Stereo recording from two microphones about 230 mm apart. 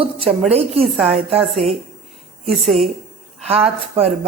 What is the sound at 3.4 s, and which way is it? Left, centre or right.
Speech, right.